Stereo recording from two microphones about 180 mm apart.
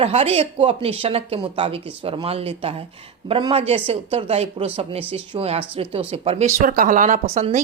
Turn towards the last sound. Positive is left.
turn(degrees=-35)  # may be behind; listen again after turning